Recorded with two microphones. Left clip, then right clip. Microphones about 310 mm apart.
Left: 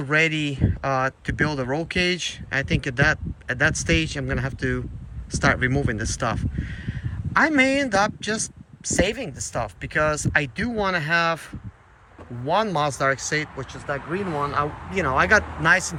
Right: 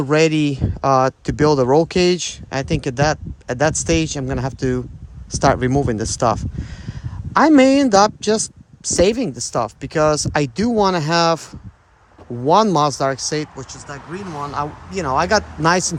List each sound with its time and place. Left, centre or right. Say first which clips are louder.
0.0 s speech: right 6 dB; centre
12.5 s speech: right 8 dB; centre